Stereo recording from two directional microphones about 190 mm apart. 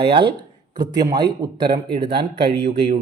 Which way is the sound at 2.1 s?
60° right (ahead or behind).